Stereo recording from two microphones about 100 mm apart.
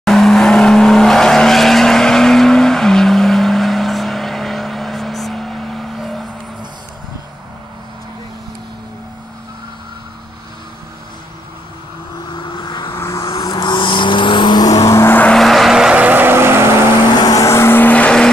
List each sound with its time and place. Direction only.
0.0 s vehicle: 5° left (ahead or behind)
12.4 s vehicle: 50° left (ahead or behind)
12.9 s vehicle: 30° left (ahead or behind)
13.4 s vehicle: 45° left (ahead or behind); by 15.1 s 30° left (ahead or behind)
15.3 s vehicle: centre (ahead or behind)
16.0 s vehicle: 20° right (ahead or behind)
17.2 s vehicle: 35° left (ahead or behind); by 18.3 s 10° left (ahead or behind)